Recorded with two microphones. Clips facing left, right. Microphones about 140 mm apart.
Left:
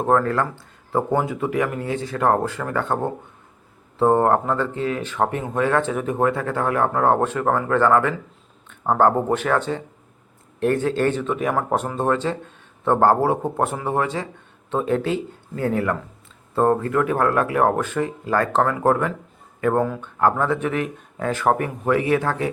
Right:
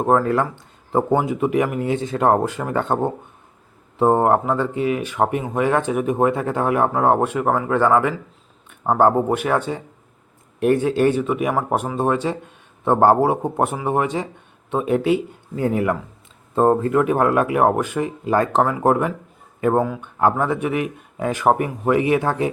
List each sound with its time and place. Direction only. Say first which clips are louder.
0.0 s speech: right 2 dB; 15° right (ahead or behind)